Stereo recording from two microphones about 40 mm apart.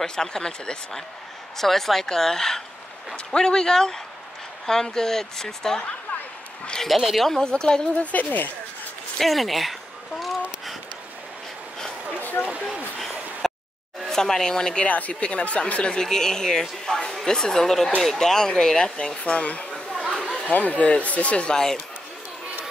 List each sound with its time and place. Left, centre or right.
0.0 s speech: centre
1.6 s speech: centre
6.9 s speech: centre
7.2 s speech: centre
7.9 s a woman's voice: left
9.2 s speech: centre
12.2 s a sound: left
13.4 s a sound: centre
14.0 s speech: centre
14.9 s speech: left
16.0 s speech: centre; by 21.5 s left